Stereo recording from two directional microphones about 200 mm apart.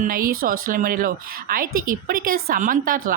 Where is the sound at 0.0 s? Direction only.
45° right (ahead or behind).